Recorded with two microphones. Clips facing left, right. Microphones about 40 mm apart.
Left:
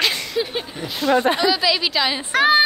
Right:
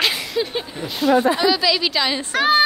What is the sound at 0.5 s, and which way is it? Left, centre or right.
A man's voice, centre.